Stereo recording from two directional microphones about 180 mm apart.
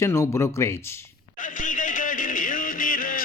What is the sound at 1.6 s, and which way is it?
Music, 45° left (ahead or behind).